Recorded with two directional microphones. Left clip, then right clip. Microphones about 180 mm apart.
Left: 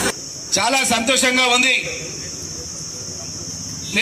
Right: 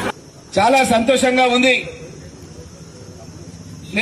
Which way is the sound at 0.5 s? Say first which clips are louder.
Right 4 dB; 55° right (ahead or behind).